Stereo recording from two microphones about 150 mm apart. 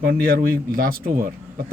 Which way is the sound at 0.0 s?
90° right.